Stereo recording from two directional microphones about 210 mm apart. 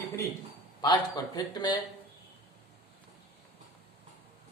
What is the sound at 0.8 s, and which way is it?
Speech, 20° left (ahead or behind).